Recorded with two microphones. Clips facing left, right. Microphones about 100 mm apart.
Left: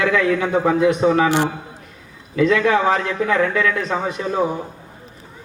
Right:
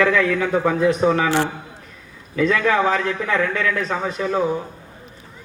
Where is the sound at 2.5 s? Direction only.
30° left (ahead or behind).